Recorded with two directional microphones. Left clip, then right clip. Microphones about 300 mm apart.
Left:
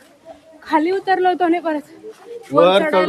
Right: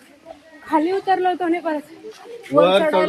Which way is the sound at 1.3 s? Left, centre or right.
Centre.